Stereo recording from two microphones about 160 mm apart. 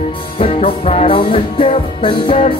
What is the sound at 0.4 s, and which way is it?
Music, 35° left (ahead or behind).